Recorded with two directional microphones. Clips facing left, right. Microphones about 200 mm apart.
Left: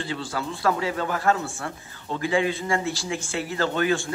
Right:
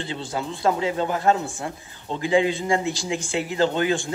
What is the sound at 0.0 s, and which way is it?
A man's voice, 20° right (ahead or behind).